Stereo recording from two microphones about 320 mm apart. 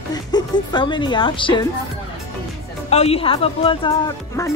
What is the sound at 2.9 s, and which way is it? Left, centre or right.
Speech, centre.